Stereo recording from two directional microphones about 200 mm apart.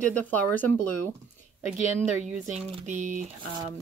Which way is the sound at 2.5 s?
35° right (ahead or behind).